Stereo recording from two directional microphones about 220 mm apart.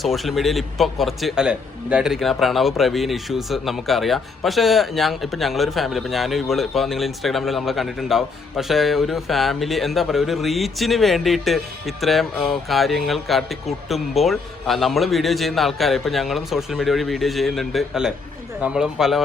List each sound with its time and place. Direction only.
0.0 s a man's voice: centre (ahead or behind)